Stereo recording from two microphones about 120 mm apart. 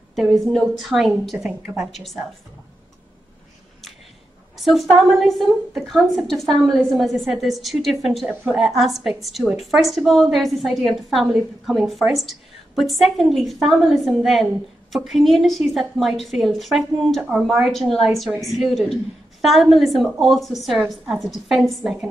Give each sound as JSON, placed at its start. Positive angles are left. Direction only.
{"t": 0.1, "sound": "a woman's voice", "side_deg": 0}
{"t": 1.5, "sound": "speech", "side_deg": -15}
{"t": 1.9, "sound": "a woman's voice", "side_deg": 0}
{"t": 4.6, "sound": "a woman's voice", "side_deg": 0}